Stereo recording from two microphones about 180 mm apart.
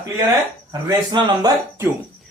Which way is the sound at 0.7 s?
20° right (ahead or behind).